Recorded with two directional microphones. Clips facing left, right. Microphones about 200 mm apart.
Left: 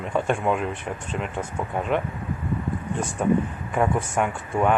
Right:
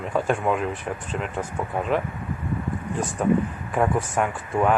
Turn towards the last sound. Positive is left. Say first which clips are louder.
# even
turn(degrees=0)  # may be behind; listen again after turning